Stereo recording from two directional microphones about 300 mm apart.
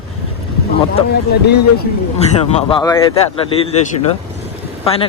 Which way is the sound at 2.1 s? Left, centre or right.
Centre.